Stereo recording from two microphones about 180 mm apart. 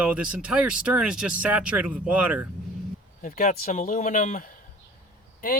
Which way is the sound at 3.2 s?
50° left (ahead or behind).